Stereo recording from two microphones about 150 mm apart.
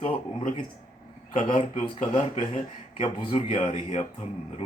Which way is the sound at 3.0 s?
40° left (ahead or behind).